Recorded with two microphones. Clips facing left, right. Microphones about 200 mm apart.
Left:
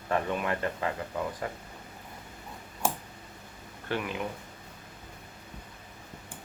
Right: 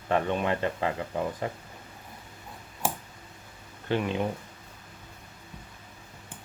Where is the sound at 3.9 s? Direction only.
25° right (ahead or behind).